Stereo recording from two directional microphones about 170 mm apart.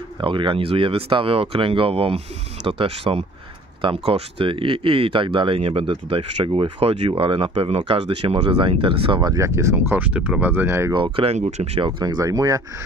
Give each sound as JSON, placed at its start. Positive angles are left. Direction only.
{"t": 0.2, "sound": "speech", "side_deg": -30}
{"t": 11.0, "sound": "speech", "side_deg": -35}
{"t": 12.0, "sound": "speech", "side_deg": -20}